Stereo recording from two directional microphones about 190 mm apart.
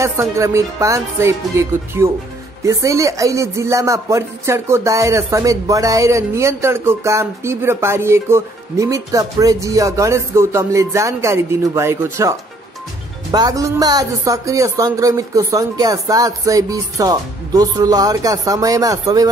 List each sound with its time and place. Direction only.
0.0 s speech: 15° right (ahead or behind)